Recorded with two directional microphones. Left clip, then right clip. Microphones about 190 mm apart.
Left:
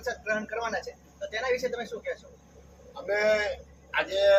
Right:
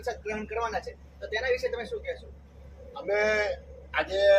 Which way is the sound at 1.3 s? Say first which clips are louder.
Right 1 dB; 20° right (ahead or behind).